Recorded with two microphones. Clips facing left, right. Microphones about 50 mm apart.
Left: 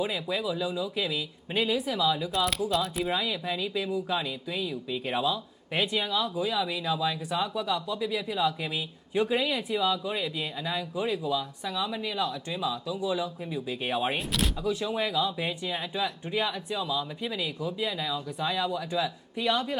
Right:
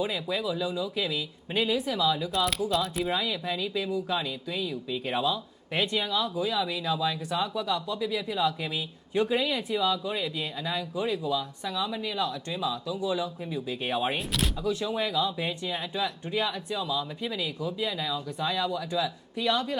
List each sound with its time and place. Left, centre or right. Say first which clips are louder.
0.0 s speech: even; centre